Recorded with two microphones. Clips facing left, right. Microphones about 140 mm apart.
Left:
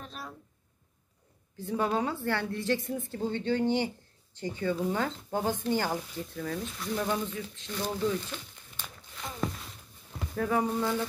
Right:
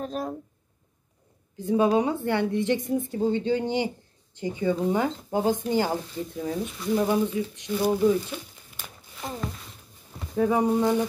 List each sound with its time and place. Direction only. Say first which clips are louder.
0.0 s speech: right 13 dB; 45° right (ahead or behind)
1.6 s a woman's voice: right 8 dB; 15° right (ahead or behind)
10.3 s speech: right 6 dB; 20° right (ahead or behind)